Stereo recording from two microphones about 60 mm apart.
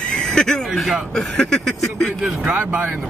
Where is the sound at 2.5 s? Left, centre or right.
Right.